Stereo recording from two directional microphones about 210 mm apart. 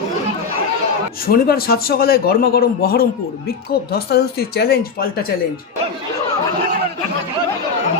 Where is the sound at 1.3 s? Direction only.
45° left (ahead or behind).